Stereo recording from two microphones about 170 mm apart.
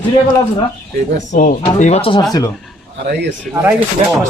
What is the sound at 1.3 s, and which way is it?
Speech, 50° left (ahead or behind).